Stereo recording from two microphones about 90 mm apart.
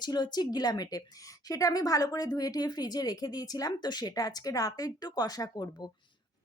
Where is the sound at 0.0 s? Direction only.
50° left (ahead or behind).